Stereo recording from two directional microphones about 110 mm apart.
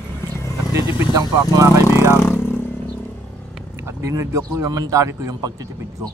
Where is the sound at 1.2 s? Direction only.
30° right (ahead or behind).